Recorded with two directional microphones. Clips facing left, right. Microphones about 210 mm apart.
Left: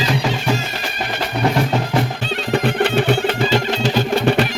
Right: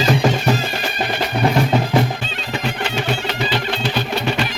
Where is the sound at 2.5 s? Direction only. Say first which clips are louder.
Left 7 dB; 55° left (ahead or behind).